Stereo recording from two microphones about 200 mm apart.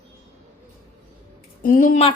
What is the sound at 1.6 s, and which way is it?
Speech, 40° left (ahead or behind).